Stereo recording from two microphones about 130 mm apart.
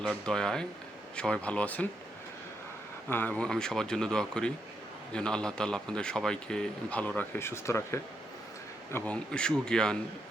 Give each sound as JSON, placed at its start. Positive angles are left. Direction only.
{"t": 0.0, "sound": "speech", "side_deg": 5}
{"t": 3.1, "sound": "speech", "side_deg": 15}